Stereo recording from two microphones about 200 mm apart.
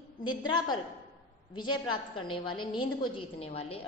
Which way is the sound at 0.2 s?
20° left (ahead or behind).